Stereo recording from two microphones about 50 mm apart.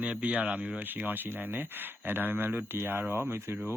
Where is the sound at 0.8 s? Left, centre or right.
Right.